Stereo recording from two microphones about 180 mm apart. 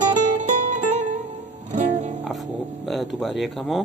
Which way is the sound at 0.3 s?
40° right (ahead or behind).